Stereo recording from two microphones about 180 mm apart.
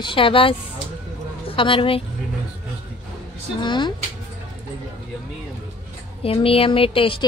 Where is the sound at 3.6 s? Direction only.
25° left (ahead or behind).